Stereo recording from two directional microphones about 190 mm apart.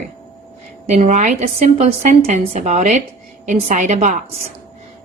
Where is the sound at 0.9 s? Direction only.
40° right (ahead or behind).